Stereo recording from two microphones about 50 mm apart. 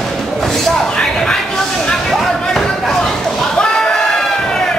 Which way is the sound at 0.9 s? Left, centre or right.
Centre.